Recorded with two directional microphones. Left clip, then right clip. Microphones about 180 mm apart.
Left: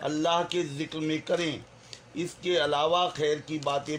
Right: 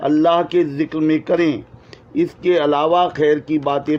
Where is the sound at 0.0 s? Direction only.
35° right (ahead or behind).